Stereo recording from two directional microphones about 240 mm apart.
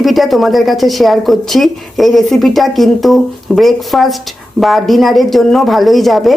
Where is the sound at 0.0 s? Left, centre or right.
Centre.